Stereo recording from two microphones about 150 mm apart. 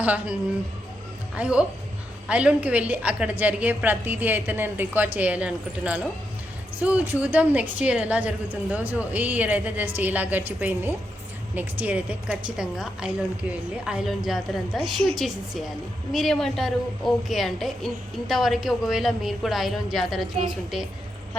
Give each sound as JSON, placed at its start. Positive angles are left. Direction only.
{"t": 0.0, "sound": "a woman's voice", "side_deg": -10}
{"t": 1.4, "sound": "a woman's voice", "side_deg": -5}